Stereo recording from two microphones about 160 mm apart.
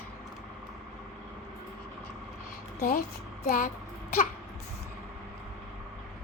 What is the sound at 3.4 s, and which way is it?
Child singing, 60° left (ahead or behind).